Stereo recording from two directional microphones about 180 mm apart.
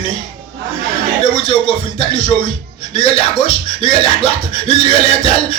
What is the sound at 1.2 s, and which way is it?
Speech, 30° left (ahead or behind).